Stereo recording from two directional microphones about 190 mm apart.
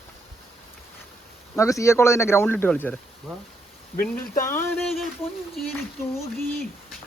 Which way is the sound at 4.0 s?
10° left (ahead or behind).